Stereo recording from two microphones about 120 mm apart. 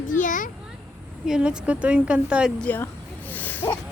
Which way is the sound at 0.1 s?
90° left.